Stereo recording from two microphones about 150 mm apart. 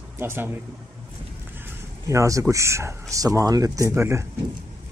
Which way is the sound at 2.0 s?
20° right (ahead or behind).